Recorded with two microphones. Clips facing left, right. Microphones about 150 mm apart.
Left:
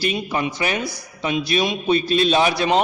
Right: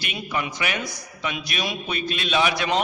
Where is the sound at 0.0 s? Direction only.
35° left (ahead or behind).